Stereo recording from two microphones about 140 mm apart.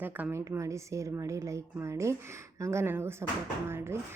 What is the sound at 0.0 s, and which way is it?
A woman's voice, 15° right (ahead or behind).